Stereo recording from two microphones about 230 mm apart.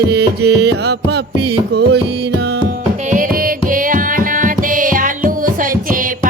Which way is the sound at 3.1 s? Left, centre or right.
Right.